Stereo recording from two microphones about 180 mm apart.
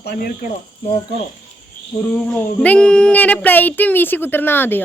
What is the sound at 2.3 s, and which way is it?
Speech, 5° left (ahead or behind).